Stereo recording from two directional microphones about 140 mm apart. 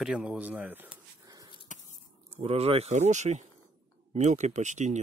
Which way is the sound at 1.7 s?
60° left (ahead or behind).